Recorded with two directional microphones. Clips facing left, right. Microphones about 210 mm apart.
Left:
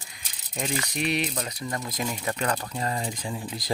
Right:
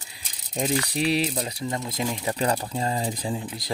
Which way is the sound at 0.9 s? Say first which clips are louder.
Right 4 dB; 30° right (ahead or behind).